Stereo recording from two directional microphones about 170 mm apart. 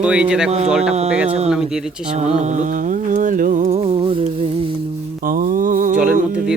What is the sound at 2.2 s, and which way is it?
Music, 40° right (ahead or behind).